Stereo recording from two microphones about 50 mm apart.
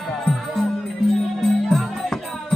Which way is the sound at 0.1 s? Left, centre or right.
Centre.